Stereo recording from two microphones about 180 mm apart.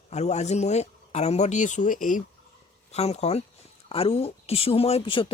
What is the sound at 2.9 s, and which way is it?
Speech, 35° left (ahead or behind).